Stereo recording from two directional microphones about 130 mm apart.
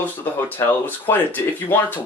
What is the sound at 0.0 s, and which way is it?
Speech, 15° left (ahead or behind).